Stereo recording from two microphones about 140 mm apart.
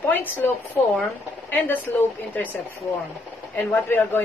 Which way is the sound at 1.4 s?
15° left (ahead or behind).